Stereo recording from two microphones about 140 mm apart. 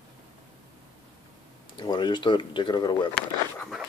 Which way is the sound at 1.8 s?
30° left (ahead or behind).